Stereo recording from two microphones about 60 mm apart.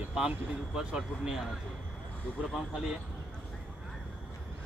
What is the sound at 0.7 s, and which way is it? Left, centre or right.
Speech, centre.